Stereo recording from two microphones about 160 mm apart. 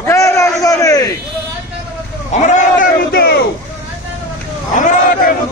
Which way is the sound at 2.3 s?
50° left (ahead or behind).